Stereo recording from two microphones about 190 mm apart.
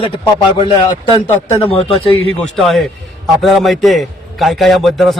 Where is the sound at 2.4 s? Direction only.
Centre (ahead or behind).